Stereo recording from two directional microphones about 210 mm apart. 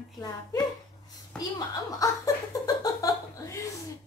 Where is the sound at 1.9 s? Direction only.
15° left (ahead or behind).